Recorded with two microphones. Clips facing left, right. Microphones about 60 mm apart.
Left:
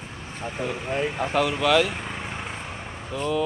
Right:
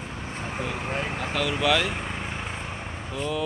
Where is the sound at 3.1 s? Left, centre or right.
Centre.